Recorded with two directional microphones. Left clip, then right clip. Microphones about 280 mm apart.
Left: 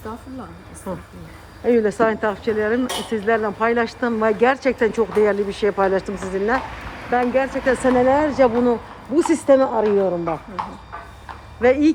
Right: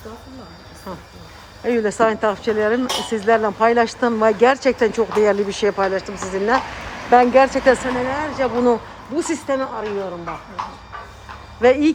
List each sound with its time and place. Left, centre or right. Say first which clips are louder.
0.9 s speech: left 3 dB; centre
6.7 s a sound: right 3 dB; right
7.1 s speech: right 7 dB; centre
7.9 s speech: left 6 dB; centre
11.6 s speech: right 1 dB; centre